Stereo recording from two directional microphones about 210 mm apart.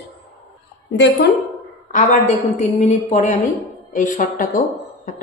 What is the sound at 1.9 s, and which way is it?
A woman's voice, 35° left (ahead or behind).